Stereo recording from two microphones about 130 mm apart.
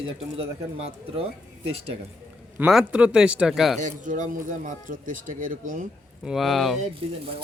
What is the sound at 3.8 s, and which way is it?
A man's voice, 85° right.